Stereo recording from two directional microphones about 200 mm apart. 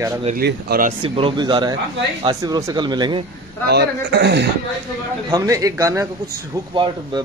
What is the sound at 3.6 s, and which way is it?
Speech, 55° right (ahead or behind).